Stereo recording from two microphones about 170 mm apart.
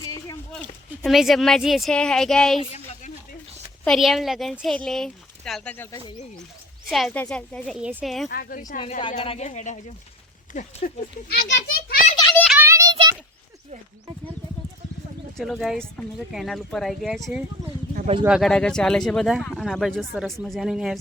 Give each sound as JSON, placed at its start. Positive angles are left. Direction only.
{"t": 0.5, "sound": "speech", "side_deg": 0}
{"t": 2.6, "sound": "a sound", "side_deg": 40}
{"t": 3.8, "sound": "speech", "side_deg": 0}
{"t": 6.8, "sound": "speech", "side_deg": 0}
{"t": 7.8, "sound": "speech", "side_deg": -10}
{"t": 8.0, "sound": "speech", "side_deg": 0}
{"t": 8.3, "sound": "speech", "side_deg": 60}
{"t": 8.8, "sound": "a woman's voice", "side_deg": 30}
{"t": 11.3, "sound": "a child's voice", "side_deg": 80}
{"t": 12.5, "sound": "a sound", "side_deg": -10}
{"t": 12.7, "sound": "a sound", "side_deg": -20}
{"t": 15.4, "sound": "speech", "side_deg": 0}